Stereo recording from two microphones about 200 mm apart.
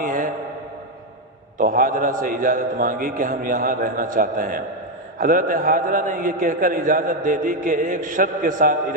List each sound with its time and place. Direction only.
0.0 s mantra: 45° right (ahead or behind)
1.5 s a man's voice: 45° right (ahead or behind)